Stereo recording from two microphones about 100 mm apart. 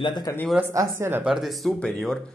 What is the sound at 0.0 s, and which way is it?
Speech, 45° left (ahead or behind).